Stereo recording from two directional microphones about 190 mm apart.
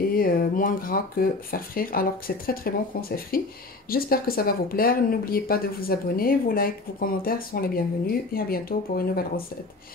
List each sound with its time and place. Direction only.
0.1 s speech: 50° left (ahead or behind)